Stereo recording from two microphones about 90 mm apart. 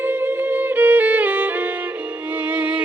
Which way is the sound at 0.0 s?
20° right (ahead or behind).